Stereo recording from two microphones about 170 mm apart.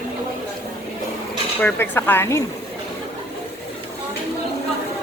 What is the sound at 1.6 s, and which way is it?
Speech, 10° left (ahead or behind).